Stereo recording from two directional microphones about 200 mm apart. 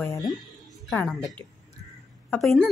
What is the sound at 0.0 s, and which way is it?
Speech, 15° left (ahead or behind).